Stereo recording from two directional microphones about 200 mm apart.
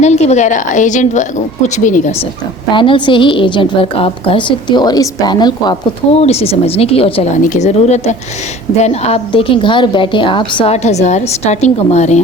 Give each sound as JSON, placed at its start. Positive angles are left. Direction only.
{"t": 0.0, "sound": "a woman's voice", "side_deg": 35}
{"t": 2.7, "sound": "a woman's voice", "side_deg": 25}
{"t": 6.1, "sound": "a woman's voice", "side_deg": 30}